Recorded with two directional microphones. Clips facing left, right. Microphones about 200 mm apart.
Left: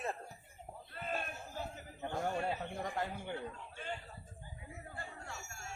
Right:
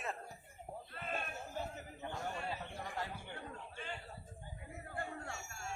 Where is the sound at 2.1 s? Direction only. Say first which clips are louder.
Left 6 dB; 50° left (ahead or behind).